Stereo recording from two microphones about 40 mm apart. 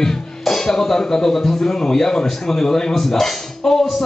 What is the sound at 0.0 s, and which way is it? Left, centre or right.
Speech, centre.